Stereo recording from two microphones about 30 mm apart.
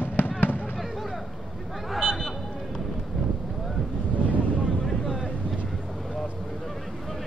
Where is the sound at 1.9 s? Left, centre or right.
Centre.